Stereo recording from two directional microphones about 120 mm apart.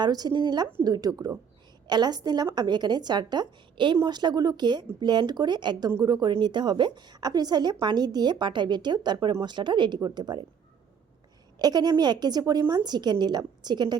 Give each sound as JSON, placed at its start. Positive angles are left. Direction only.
{"t": 0.0, "sound": "a woman's voice", "side_deg": -35}
{"t": 11.6, "sound": "a woman's voice", "side_deg": -35}